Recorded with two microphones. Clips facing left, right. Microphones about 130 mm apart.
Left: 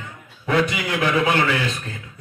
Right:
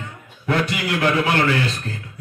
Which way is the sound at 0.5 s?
55° right (ahead or behind).